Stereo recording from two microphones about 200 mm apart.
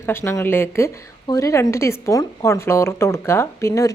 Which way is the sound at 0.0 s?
15° left (ahead or behind).